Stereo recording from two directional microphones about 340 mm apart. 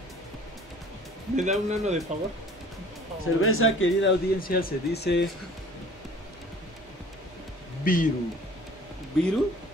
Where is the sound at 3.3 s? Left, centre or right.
Left.